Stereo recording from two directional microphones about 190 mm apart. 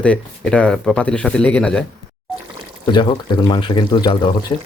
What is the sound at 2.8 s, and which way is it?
Speech, 25° left (ahead or behind).